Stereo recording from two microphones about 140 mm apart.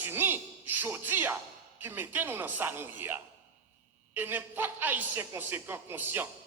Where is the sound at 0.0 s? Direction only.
15° right (ahead or behind).